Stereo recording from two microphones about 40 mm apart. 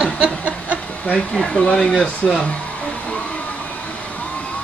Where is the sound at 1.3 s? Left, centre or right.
Left.